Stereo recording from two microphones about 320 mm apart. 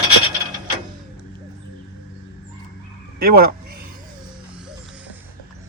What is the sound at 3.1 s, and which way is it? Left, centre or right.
Speech, right.